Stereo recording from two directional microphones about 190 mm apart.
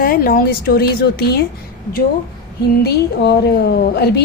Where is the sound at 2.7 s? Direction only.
60° left (ahead or behind).